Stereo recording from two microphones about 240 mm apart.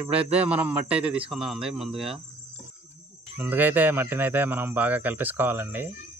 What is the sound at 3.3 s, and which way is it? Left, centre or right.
Speech, centre.